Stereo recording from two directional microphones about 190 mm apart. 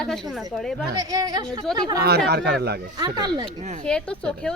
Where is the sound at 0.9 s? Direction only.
20° right (ahead or behind).